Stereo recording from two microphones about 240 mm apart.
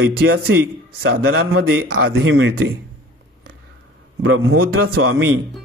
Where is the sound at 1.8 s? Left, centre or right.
Right.